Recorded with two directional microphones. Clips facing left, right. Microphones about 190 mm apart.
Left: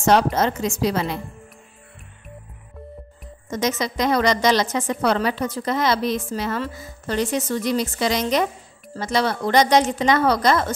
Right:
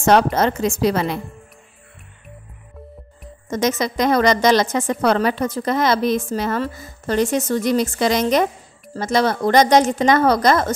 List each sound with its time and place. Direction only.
0.0 s a woman's voice: 60° right (ahead or behind)
3.4 s a woman's voice: 45° right (ahead or behind)